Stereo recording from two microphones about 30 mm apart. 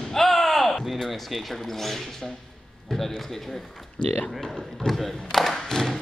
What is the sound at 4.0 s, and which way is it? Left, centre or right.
Speech, left.